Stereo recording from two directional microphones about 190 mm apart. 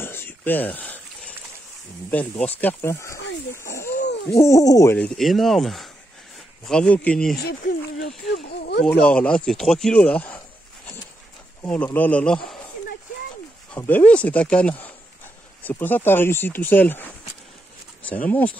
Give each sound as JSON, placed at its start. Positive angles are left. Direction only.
{"t": 0.0, "sound": "a sound", "side_deg": 10}
{"t": 2.0, "sound": "speech", "side_deg": 10}
{"t": 3.5, "sound": "a sound", "side_deg": 15}
{"t": 4.4, "sound": "speech", "side_deg": 15}
{"t": 7.4, "sound": "speech", "side_deg": 55}
{"t": 9.0, "sound": "speech", "side_deg": 5}
{"t": 11.6, "sound": "speech", "side_deg": 10}
{"t": 13.7, "sound": "speech", "side_deg": 10}